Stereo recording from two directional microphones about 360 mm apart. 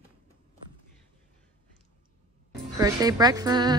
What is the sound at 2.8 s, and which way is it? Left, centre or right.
Speech, centre.